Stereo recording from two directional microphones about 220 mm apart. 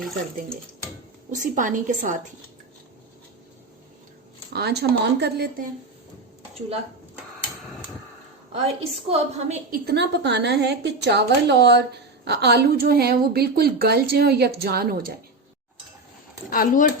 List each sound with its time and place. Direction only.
1.3 s a woman's voice: 35° right (ahead or behind)
4.5 s a woman's voice: 50° right (ahead or behind)
8.5 s a woman's voice: 25° right (ahead or behind)
9.6 s a woman's voice: 40° right (ahead or behind)
16.5 s speech: 40° left (ahead or behind)